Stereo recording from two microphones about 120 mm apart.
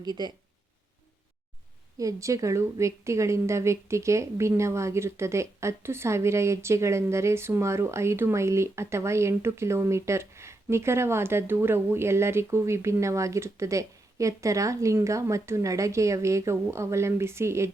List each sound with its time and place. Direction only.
0.0 s speech: 35° right (ahead or behind)
2.0 s a woman's voice: 25° right (ahead or behind)